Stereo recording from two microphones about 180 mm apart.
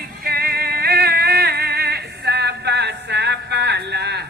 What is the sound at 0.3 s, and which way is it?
Music, 60° right (ahead or behind).